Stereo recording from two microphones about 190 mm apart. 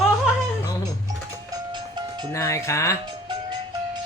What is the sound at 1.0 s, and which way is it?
Music, 20° right (ahead or behind).